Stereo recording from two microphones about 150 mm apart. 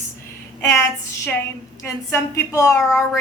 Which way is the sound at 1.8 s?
20° left (ahead or behind).